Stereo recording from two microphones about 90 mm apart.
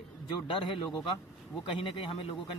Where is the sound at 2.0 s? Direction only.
90° left.